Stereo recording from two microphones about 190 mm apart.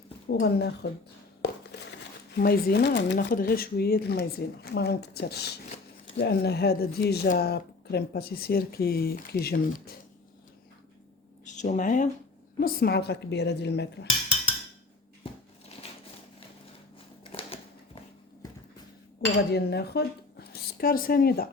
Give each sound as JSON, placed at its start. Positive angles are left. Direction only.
{"t": 0.3, "sound": "speech", "side_deg": 60}
{"t": 2.3, "sound": "speech", "side_deg": 55}
{"t": 3.2, "sound": "speech", "side_deg": 55}
{"t": 11.4, "sound": "speech", "side_deg": 40}
{"t": 12.5, "sound": "speech", "side_deg": 55}
{"t": 17.3, "sound": "typewriter", "side_deg": 30}
{"t": 19.5, "sound": "a woman's voice", "side_deg": 60}